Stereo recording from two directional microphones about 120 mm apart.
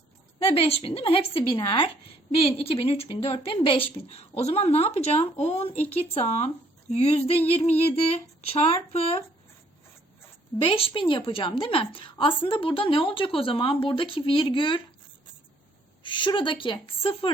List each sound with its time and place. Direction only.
0.3 s a woman's voice: 55° left (ahead or behind)
10.6 s a woman's voice: 50° left (ahead or behind)
16.0 s a woman's voice: 40° left (ahead or behind)